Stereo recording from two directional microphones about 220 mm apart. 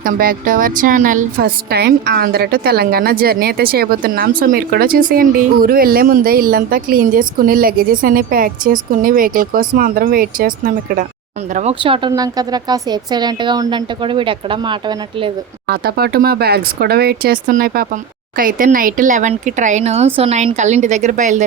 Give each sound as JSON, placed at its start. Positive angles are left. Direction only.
{"t": 0.0, "sound": "a woman's voice", "side_deg": -40}
{"t": 11.5, "sound": "speech", "side_deg": -25}
{"t": 15.6, "sound": "a woman's voice", "side_deg": -45}